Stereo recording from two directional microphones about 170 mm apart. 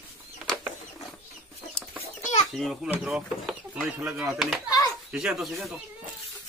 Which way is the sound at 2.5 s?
Centre (ahead or behind).